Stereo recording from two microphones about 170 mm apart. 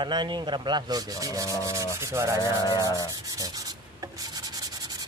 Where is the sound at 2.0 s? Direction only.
15° right (ahead or behind).